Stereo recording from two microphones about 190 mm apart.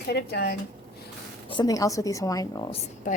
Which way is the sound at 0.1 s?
60° left (ahead or behind).